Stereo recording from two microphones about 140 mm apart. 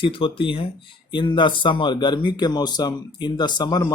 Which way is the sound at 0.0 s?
40° left (ahead or behind).